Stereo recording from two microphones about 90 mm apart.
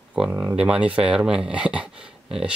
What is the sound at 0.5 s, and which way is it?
Speech, 10° right (ahead or behind).